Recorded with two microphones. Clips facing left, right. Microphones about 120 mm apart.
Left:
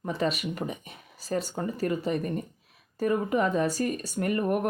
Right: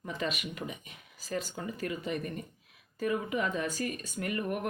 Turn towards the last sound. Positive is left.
turn(degrees=45)  # may be behind; listen again after turning